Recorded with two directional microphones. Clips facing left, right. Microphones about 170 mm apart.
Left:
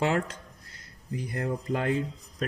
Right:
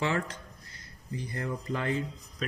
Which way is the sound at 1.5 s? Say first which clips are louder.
Left 4 dB; 55° left (ahead or behind).